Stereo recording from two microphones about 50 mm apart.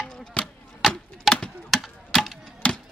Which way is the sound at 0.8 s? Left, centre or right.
Centre.